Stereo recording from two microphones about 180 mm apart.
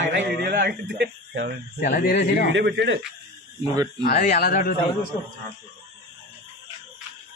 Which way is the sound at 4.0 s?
45° left (ahead or behind).